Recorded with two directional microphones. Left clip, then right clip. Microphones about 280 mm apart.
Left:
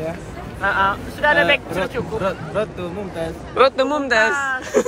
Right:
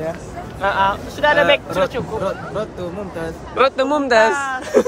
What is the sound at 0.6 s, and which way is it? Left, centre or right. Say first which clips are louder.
Speech: right 1 dB; right.